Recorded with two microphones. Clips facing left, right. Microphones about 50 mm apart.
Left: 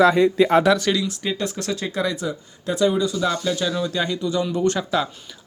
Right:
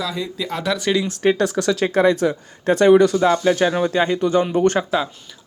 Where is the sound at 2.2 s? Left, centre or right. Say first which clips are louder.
Right 7 dB; right.